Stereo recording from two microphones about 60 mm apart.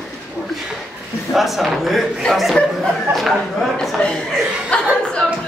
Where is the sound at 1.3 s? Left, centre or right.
Centre.